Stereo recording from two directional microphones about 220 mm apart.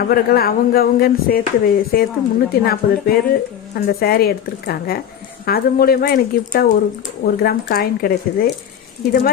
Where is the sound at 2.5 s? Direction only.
45° left (ahead or behind).